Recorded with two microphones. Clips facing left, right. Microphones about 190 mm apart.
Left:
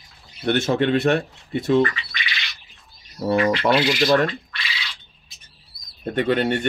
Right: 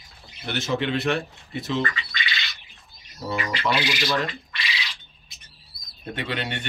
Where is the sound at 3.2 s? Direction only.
60° left (ahead or behind).